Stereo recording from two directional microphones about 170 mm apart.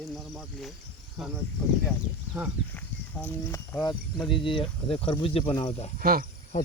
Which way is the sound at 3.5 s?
15° left (ahead or behind).